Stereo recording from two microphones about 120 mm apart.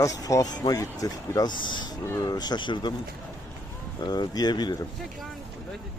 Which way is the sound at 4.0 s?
35° left (ahead or behind).